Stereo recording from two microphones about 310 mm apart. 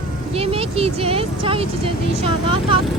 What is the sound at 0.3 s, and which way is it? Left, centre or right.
Speech, centre.